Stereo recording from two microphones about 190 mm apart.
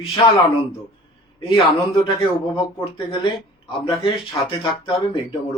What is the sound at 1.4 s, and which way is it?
Speech, 25° left (ahead or behind).